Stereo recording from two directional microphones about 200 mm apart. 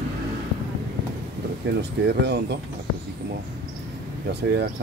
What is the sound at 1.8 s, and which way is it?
Speech, 55° right (ahead or behind).